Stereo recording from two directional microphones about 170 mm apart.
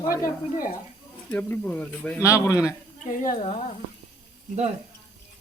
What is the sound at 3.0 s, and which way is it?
Speech, 55° left (ahead or behind).